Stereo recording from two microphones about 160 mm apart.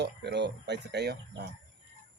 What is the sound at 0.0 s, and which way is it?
Speech, 90° right.